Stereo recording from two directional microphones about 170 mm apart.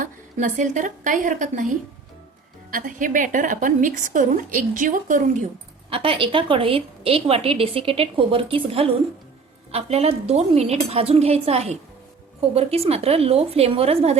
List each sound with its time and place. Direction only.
0.0 s a woman's voice: 50° right (ahead or behind)
5.9 s a woman's voice: 35° right (ahead or behind)